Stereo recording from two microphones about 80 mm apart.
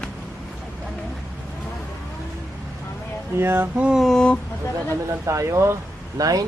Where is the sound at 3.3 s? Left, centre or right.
Right.